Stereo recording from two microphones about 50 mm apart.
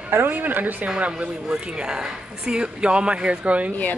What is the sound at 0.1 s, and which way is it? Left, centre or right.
Speech, right.